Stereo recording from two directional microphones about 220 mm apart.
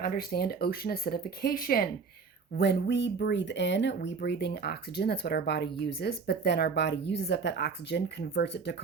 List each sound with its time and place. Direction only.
0.0 s speech: 40° left (ahead or behind)